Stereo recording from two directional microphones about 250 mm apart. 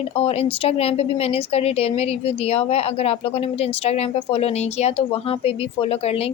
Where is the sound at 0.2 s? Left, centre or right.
Left.